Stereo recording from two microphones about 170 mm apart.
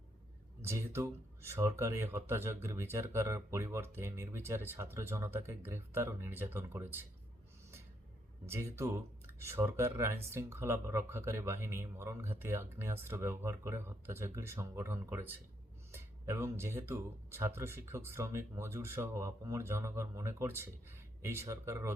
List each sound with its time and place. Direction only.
0.6 s speech: 15° right (ahead or behind)
8.4 s speech: 15° right (ahead or behind)